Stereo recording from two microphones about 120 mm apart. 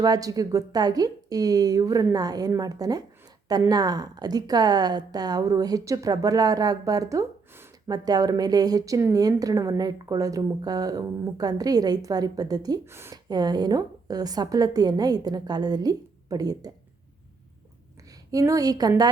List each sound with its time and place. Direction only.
0.0 s speech: 30° right (ahead or behind)
7.9 s speech: 35° right (ahead or behind)
12.8 s speech: 20° right (ahead or behind)
13.2 s speech: 35° right (ahead or behind)
18.3 s speech: 30° right (ahead or behind)